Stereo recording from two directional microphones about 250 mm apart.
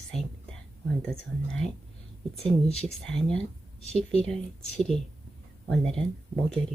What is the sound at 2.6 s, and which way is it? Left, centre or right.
Speech, left.